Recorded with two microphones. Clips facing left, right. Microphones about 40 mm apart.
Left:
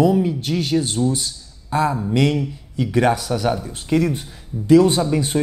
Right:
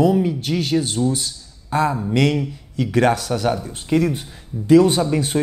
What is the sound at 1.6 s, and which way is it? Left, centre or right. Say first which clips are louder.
Speech: even; centre.